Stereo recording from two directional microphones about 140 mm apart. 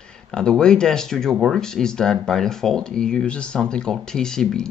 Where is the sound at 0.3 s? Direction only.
5° left (ahead or behind).